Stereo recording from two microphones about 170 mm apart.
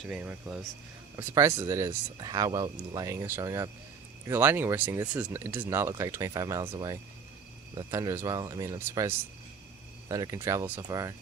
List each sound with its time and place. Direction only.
0.0 s speech: 5° right (ahead or behind)